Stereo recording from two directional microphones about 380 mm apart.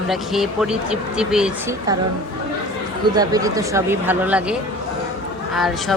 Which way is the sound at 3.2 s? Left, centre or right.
Centre.